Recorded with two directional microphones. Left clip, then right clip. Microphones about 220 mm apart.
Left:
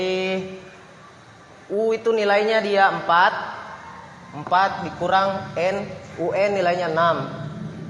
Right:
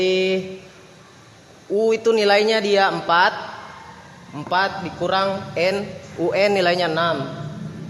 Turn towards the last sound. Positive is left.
turn(degrees=-35)  # may be behind; listen again after turning